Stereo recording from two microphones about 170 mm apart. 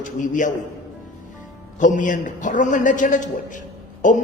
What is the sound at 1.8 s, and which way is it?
A man's voice, 50° left (ahead or behind).